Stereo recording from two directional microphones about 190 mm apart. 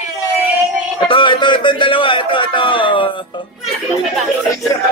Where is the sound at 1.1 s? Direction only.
25° left (ahead or behind).